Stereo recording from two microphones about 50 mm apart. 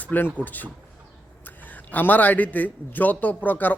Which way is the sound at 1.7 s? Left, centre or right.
Left.